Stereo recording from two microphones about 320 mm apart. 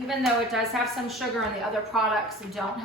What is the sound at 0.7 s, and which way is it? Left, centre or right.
A woman's voice, centre.